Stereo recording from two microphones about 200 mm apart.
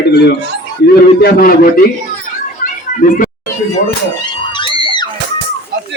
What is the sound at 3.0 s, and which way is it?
Speech, 40° left (ahead or behind).